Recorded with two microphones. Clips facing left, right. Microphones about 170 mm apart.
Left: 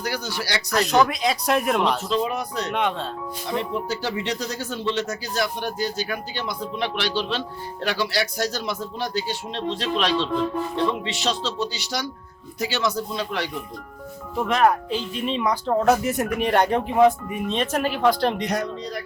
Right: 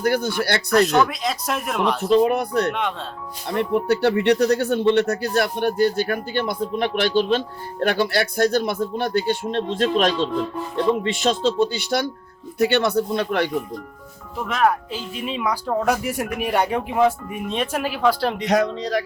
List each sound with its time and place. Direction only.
0.0 s speech: 55° right (ahead or behind)
1.0 s speech: centre (ahead or behind)
2.0 s speech: 55° right (ahead or behind)
14.3 s speech: centre (ahead or behind)
18.4 s speech: 90° right